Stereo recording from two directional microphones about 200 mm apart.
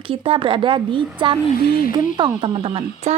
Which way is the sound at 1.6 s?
50° left (ahead or behind).